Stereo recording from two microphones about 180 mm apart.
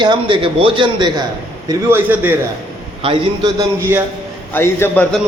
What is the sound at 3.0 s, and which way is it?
Speech, 25° right (ahead or behind).